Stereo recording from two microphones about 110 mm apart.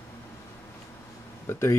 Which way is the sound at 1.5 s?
25° left (ahead or behind).